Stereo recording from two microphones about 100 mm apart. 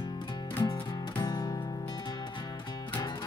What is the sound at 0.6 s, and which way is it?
Music, 45° left (ahead or behind).